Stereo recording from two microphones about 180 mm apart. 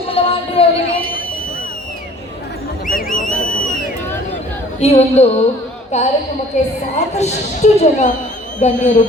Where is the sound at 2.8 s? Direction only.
50° left (ahead or behind).